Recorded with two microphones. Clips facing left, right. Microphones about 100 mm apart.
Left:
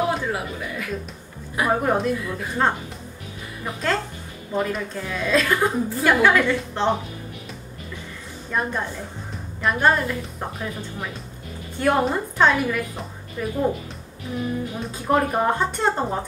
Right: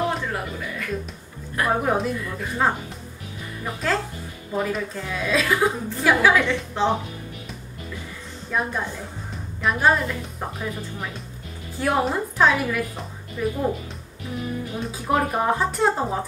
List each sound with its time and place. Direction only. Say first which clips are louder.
0.1 s a woman's voice: left 2 dB; 5° left (ahead or behind)
8.5 s a woman's voice: even; centre (ahead or behind)
14.8 s a woman's voice: left 1 dB; centre (ahead or behind)